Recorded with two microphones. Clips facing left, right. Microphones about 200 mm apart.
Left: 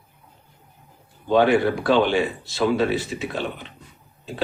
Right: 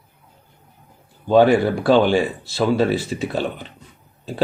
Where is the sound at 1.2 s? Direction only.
35° right (ahead or behind).